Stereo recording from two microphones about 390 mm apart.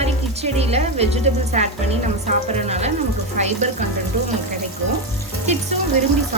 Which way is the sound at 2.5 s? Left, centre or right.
Centre.